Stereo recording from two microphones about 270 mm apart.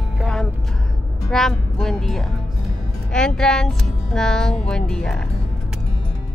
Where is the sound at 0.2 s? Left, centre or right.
Centre.